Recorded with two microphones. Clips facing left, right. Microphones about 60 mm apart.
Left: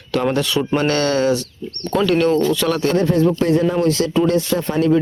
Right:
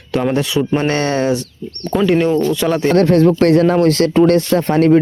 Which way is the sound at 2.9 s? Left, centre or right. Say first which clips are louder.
Right 7 dB; right.